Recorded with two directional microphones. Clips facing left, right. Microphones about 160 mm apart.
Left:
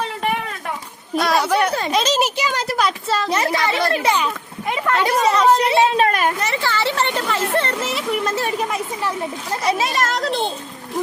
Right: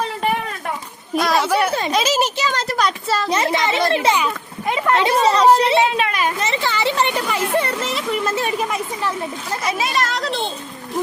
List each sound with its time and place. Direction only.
1.2 s speech: centre (ahead or behind)
2.2 s speech: 10° left (ahead or behind)
3.2 s speech: 25° right (ahead or behind)
5.9 s a child's voice: 45° left (ahead or behind)
6.4 s speech: 20° right (ahead or behind)
7.8 s speech: 5° left (ahead or behind)
9.5 s a child's voice: 35° left (ahead or behind)